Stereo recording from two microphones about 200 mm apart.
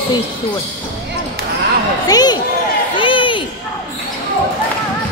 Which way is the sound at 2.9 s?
25° left (ahead or behind).